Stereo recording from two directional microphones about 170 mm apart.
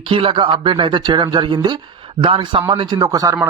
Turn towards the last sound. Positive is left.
turn(degrees=-20)  # may be behind; listen again after turning